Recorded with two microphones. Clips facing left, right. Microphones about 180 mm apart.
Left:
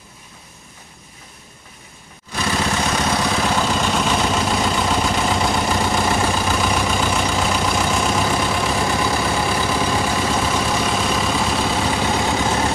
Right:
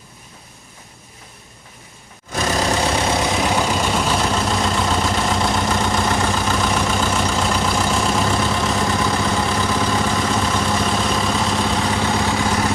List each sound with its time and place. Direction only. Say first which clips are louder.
2.3 s vehicle: right 2 dB; 40° right (ahead or behind)
3.3 s vehicle: right 1 dB; 10° right (ahead or behind); by 12.5 s 15° left (ahead or behind)